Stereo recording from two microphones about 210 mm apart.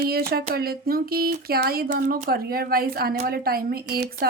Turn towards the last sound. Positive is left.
turn(degrees=-50)  # may be behind; listen again after turning